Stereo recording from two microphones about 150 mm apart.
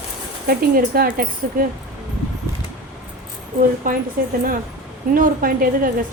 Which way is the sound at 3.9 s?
65° right (ahead or behind).